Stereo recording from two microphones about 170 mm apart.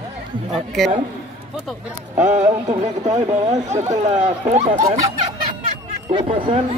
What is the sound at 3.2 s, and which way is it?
Speech, 35° right (ahead or behind).